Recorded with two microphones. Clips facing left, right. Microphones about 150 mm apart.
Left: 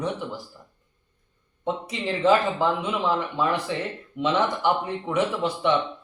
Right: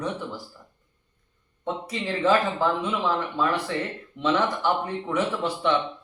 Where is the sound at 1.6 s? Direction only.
20° left (ahead or behind).